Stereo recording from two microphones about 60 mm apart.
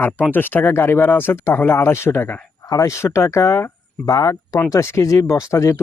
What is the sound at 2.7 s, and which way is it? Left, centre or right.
Speech, left.